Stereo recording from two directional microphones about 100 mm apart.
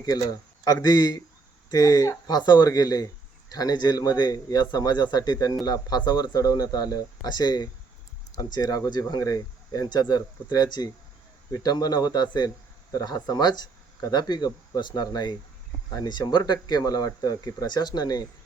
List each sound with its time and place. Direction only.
0.0 s speech: 40° left (ahead or behind)